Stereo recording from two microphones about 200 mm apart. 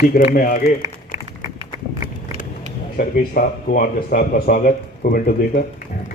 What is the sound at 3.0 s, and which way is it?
Speech, 45° left (ahead or behind).